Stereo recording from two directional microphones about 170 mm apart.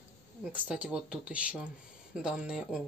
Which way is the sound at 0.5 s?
5° right (ahead or behind).